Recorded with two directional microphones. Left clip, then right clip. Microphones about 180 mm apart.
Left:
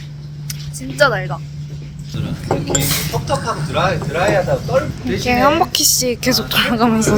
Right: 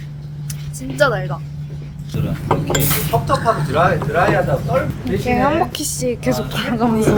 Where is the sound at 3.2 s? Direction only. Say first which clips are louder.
Right 3 dB; 40° right (ahead or behind).